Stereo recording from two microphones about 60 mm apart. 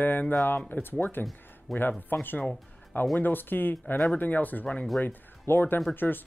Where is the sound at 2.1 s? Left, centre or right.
Left.